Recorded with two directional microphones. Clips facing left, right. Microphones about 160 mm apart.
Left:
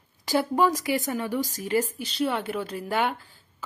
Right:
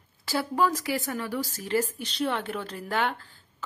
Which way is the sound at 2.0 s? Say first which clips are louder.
Left 2 dB; centre (ahead or behind).